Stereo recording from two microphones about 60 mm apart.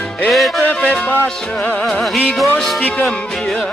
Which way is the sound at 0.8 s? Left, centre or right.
Left.